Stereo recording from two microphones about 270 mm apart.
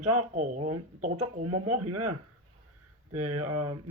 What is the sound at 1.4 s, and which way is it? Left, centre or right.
Speech, right.